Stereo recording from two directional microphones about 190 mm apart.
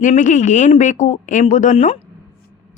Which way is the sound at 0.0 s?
40° left (ahead or behind).